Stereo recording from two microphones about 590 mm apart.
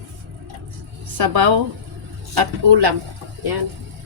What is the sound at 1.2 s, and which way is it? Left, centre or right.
A woman's voice, right.